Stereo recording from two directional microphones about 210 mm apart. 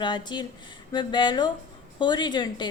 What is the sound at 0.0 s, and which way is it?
A woman's voice, 20° left (ahead or behind).